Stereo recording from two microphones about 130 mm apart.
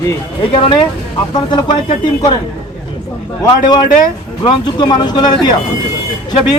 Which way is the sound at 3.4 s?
35° left (ahead or behind).